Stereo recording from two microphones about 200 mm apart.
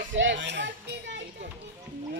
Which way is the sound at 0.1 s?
65° right (ahead or behind).